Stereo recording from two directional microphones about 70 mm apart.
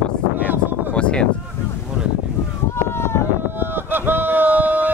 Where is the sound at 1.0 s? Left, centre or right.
Centre.